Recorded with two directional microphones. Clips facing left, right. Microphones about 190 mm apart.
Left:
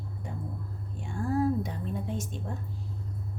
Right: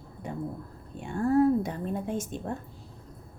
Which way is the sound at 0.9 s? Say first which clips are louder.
Right 6 dB; 60° right (ahead or behind).